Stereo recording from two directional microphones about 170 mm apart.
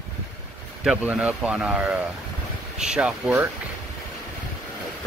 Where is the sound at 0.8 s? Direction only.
5° right (ahead or behind).